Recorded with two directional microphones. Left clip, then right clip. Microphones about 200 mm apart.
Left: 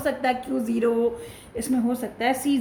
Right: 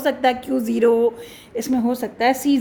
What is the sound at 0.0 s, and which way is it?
A woman's voice, 35° right (ahead or behind).